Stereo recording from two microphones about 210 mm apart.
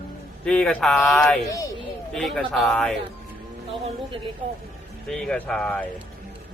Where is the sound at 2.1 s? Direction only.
Centre (ahead or behind).